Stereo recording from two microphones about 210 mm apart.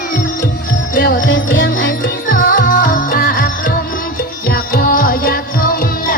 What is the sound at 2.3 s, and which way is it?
Music, 40° left (ahead or behind).